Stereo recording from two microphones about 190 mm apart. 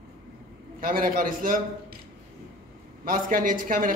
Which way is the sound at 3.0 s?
45° right (ahead or behind).